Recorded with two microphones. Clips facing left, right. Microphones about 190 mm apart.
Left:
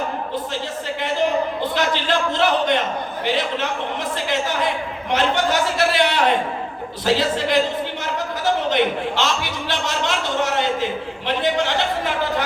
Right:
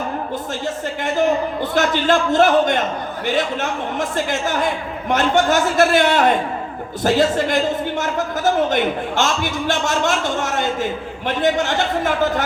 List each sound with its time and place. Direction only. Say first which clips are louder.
1.7 s a man's voice: right 6 dB; 45° right (ahead or behind)
5.1 s a man's voice: right 3 dB; 45° right (ahead or behind)